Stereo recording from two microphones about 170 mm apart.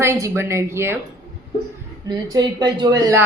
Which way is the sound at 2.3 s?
25° right (ahead or behind).